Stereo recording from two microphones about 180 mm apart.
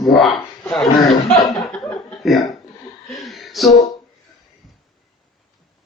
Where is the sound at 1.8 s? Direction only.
5° left (ahead or behind).